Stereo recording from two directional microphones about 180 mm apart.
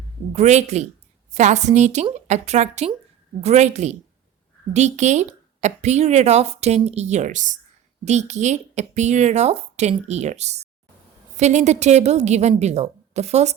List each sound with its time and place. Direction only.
0.3 s speech: 40° right (ahead or behind)